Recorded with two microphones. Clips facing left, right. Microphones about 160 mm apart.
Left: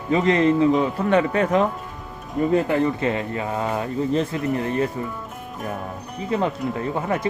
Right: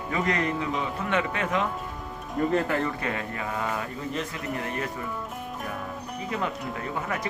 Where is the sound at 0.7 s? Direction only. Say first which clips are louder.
Left 9 dB; 40° left (ahead or behind).